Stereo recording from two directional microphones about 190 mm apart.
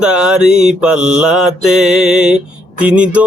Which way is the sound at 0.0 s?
5° right (ahead or behind).